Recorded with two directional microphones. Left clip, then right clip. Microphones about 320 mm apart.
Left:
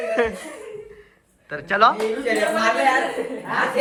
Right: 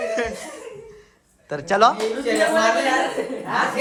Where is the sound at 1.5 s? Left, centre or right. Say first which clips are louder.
Even; centre.